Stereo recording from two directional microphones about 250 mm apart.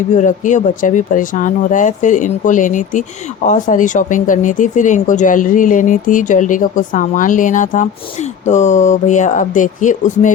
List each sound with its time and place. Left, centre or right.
0.1 s speech: left